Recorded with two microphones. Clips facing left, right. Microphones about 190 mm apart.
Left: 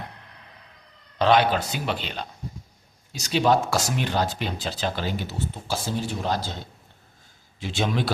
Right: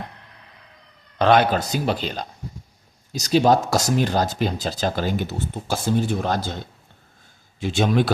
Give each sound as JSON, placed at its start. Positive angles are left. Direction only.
{"t": 1.2, "sound": "speech", "side_deg": -50}
{"t": 7.6, "sound": "a man's voice", "side_deg": -50}